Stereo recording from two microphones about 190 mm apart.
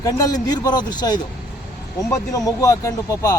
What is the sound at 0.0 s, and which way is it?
Speech, 20° left (ahead or behind).